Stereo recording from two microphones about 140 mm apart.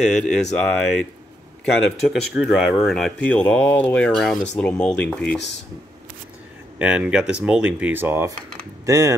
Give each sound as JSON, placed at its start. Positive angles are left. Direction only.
{"t": 0.0, "sound": "speech", "side_deg": 5}
{"t": 6.8, "sound": "speech", "side_deg": -10}